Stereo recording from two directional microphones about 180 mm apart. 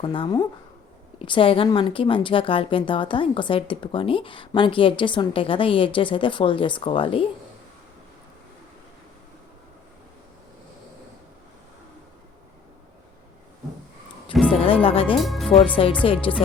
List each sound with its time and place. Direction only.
0.0 s a woman's voice: 30° left (ahead or behind)
14.5 s speech: 30° left (ahead or behind)
15.2 s speech: centre (ahead or behind)
15.8 s a woman's voice: 35° left (ahead or behind)